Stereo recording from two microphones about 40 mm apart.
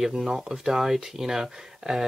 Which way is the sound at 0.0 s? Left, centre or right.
Centre.